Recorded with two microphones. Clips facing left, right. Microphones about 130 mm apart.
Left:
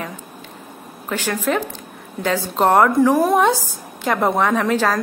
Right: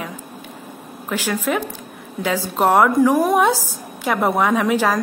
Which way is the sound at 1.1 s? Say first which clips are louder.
Even; 10° right (ahead or behind).